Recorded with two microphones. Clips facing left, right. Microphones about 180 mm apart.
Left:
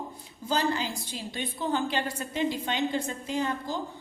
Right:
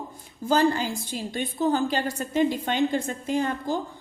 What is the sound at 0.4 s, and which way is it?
A woman's voice, 50° right (ahead or behind).